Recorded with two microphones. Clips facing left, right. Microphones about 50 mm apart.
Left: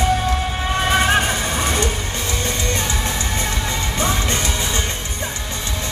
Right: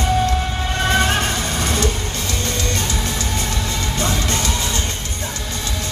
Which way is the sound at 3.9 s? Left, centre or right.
Left.